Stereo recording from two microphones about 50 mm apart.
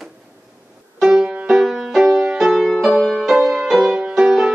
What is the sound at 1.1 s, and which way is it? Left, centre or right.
Music, centre.